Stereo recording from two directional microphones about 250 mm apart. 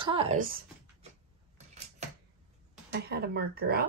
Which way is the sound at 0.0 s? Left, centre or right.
Right.